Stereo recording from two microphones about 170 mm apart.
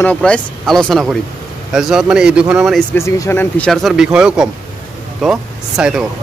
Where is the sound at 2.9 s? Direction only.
15° left (ahead or behind).